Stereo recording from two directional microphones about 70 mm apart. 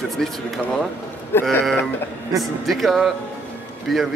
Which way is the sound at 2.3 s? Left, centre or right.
Centre.